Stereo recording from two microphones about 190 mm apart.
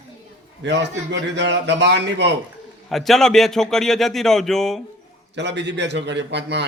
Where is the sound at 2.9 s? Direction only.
Centre (ahead or behind).